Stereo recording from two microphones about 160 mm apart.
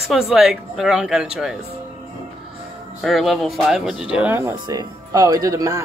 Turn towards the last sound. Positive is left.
turn(degrees=-20)  # may be behind; listen again after turning